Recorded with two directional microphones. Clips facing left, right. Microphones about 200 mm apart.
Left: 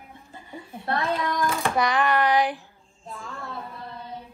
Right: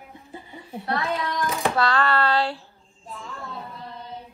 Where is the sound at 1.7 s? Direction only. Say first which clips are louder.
Even; 15° left (ahead or behind).